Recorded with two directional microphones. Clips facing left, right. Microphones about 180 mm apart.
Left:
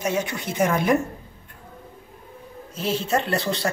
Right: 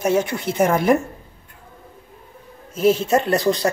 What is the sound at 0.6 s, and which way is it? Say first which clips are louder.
Speech: right 4 dB; 50° right (ahead or behind).